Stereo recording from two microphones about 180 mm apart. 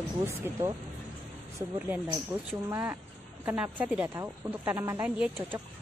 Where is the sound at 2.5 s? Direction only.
15° right (ahead or behind).